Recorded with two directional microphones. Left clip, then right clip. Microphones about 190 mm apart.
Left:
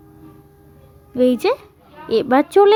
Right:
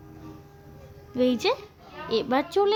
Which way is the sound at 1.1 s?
30° left (ahead or behind).